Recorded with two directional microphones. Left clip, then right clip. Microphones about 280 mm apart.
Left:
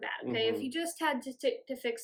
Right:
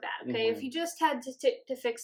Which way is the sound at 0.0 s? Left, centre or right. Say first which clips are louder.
Right 2 dB; centre.